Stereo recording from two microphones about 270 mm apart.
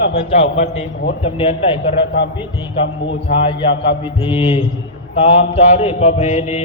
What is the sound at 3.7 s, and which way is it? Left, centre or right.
Mantra, left.